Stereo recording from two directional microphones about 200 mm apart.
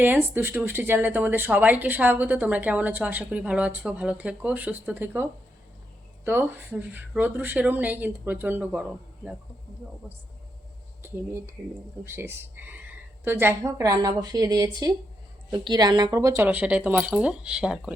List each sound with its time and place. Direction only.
0.0 s speech: 10° right (ahead or behind)
11.0 s speech: 10° right (ahead or behind)